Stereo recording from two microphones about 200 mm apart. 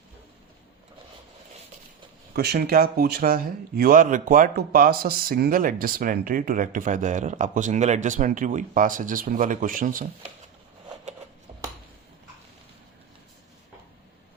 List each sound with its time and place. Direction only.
2.3 s speech: 55° right (ahead or behind)